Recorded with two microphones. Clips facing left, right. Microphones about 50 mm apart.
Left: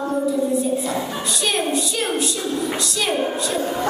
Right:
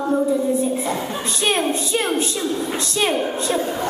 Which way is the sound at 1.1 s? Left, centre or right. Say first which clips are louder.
Right 2 dB; right.